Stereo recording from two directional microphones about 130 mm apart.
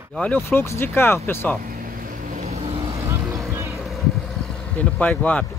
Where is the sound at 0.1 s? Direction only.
10° left (ahead or behind).